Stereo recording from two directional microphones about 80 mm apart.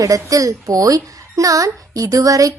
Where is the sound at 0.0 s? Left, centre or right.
Right.